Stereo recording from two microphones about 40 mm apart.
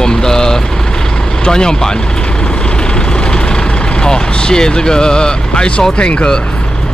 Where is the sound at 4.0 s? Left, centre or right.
Left.